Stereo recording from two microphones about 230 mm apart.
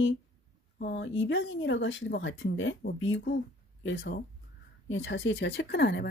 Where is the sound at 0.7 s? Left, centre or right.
Left.